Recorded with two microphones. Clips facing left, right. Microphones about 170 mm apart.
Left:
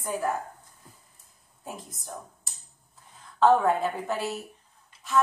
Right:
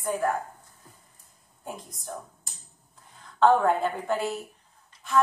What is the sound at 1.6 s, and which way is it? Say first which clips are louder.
Speech: right 1 dB; centre (ahead or behind).